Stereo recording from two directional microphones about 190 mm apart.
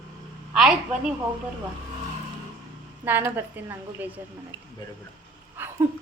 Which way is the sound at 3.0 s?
10° right (ahead or behind).